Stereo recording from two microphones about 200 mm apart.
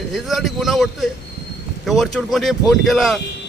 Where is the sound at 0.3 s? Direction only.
Centre (ahead or behind).